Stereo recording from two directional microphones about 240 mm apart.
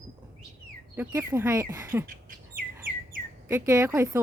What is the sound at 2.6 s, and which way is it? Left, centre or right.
Bird, right.